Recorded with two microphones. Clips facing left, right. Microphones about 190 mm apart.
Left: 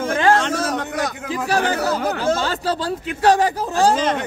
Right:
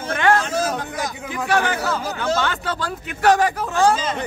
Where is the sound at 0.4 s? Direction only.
70° left (ahead or behind).